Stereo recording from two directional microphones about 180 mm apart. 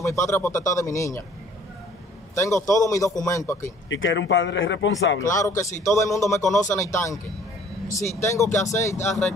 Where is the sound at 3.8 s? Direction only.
90° left.